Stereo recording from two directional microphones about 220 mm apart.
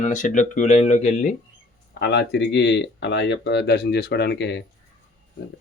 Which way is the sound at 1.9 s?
50° left (ahead or behind).